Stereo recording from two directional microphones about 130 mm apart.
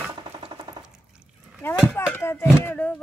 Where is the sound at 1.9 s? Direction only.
15° left (ahead or behind).